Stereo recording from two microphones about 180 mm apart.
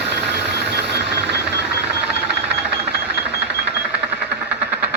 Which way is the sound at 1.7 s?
10° right (ahead or behind).